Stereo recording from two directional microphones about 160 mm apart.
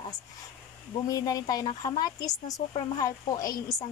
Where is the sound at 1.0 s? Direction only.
20° left (ahead or behind).